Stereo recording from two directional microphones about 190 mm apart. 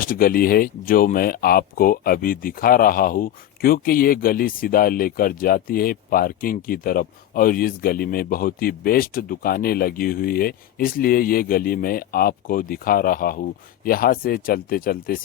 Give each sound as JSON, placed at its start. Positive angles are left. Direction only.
{"t": 0.0, "sound": "speech", "side_deg": 50}